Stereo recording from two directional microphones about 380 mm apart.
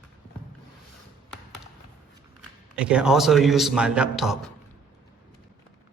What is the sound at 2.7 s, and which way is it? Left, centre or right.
A man's voice, centre.